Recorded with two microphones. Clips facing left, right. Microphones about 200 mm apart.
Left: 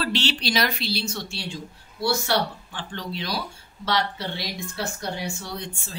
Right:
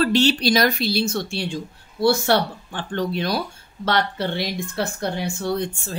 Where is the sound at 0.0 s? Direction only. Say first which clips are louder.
Right 8 dB; 45° right (ahead or behind).